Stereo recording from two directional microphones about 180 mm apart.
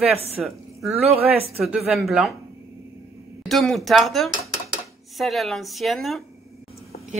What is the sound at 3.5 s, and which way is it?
Speech, centre (ahead or behind).